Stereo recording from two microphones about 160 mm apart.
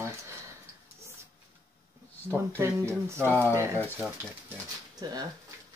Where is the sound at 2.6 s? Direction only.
15° right (ahead or behind).